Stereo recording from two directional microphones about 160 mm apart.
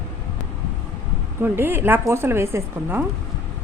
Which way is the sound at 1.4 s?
15° right (ahead or behind).